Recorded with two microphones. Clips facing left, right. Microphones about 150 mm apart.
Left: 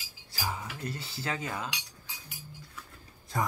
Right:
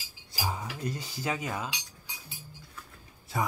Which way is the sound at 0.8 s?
15° right (ahead or behind).